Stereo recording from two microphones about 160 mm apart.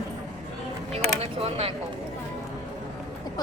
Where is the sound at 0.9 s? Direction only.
40° right (ahead or behind).